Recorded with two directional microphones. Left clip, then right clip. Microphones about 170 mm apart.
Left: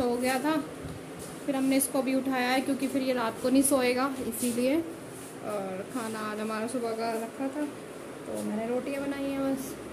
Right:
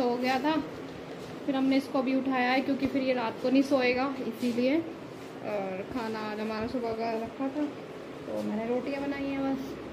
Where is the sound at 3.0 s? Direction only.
25° left (ahead or behind).